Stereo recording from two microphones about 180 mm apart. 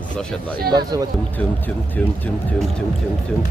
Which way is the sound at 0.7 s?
20° right (ahead or behind).